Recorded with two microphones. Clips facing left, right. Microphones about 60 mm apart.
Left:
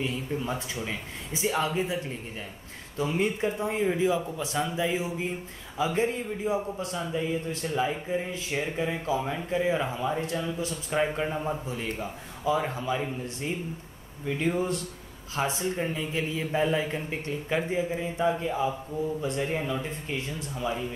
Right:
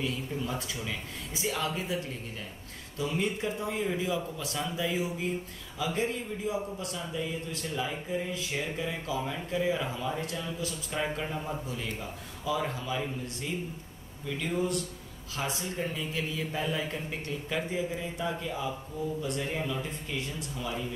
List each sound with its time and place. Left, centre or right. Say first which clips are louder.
0.0 s a man's voice: left 3 dB; left